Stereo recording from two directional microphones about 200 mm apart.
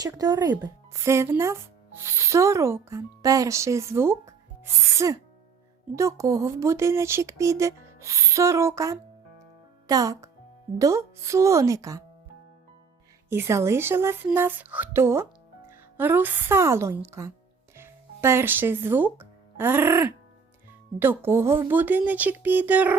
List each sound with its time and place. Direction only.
0.0 s a child's voice: 20° right (ahead or behind)
13.3 s speech: 15° right (ahead or behind)